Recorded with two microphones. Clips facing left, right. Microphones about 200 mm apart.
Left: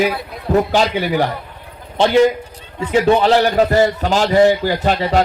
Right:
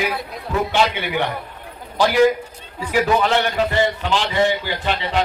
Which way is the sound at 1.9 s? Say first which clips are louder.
Left 3 dB; 25° left (ahead or behind).